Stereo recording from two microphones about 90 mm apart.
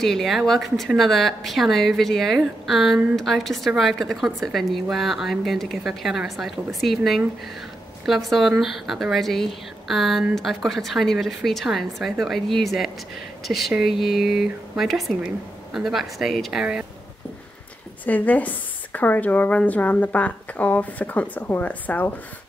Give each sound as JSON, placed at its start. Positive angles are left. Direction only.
{"t": 0.0, "sound": "a woman's voice", "side_deg": 5}
{"t": 8.0, "sound": "a woman's voice", "side_deg": 0}
{"t": 18.0, "sound": "a woman's voice", "side_deg": 20}